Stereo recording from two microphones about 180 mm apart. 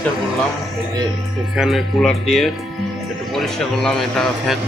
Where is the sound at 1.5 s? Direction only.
Centre (ahead or behind).